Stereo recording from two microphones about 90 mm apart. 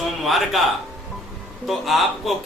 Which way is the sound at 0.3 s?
Centre (ahead or behind).